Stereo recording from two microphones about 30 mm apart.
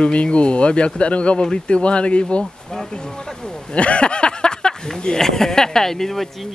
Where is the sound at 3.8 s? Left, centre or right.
Left.